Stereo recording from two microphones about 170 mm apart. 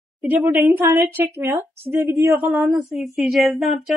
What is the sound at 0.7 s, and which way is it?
A woman's voice, 15° right (ahead or behind).